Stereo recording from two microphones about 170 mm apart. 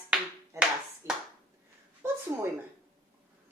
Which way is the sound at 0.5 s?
20° right (ahead or behind).